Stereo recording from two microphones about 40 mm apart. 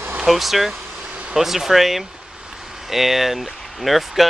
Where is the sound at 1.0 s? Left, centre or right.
Right.